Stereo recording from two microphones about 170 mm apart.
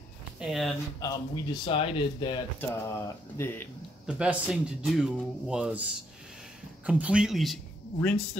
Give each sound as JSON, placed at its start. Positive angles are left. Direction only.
{"t": 0.4, "sound": "speech", "side_deg": 0}
{"t": 0.9, "sound": "speech", "side_deg": 20}
{"t": 2.6, "sound": "speech", "side_deg": 15}
{"t": 4.0, "sound": "speech", "side_deg": -5}
{"t": 6.9, "sound": "speech", "side_deg": -5}